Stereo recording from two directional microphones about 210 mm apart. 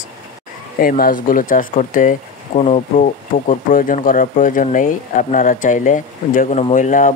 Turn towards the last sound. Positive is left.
turn(degrees=40)  # may be behind; listen again after turning